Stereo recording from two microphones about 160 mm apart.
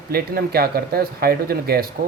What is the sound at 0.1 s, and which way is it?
Speech, 75° right (ahead or behind).